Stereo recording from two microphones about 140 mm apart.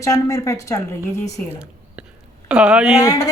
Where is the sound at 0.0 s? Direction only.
20° left (ahead or behind).